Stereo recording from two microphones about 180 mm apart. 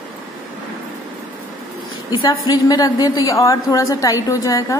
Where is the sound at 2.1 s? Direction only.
20° left (ahead or behind).